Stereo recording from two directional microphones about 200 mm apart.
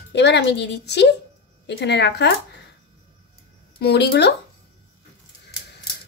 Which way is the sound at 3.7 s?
55° left (ahead or behind).